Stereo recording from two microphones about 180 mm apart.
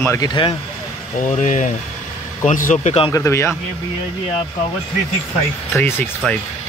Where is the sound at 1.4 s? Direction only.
40° left (ahead or behind).